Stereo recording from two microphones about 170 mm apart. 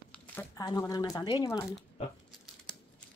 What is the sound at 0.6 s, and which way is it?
Speech, 20° left (ahead or behind).